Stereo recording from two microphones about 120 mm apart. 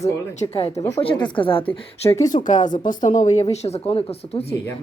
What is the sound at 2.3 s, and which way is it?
Speech, 90° left.